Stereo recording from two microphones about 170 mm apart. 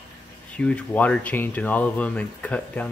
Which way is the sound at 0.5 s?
5° left (ahead or behind).